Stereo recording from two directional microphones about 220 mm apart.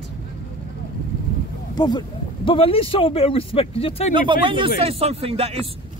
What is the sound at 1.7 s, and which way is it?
Speech, 20° left (ahead or behind).